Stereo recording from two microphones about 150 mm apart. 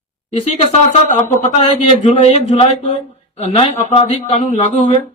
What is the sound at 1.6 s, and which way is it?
Speech, 45° left (ahead or behind).